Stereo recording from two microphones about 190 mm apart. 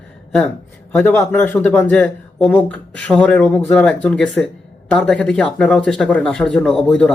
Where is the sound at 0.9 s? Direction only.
10° left (ahead or behind).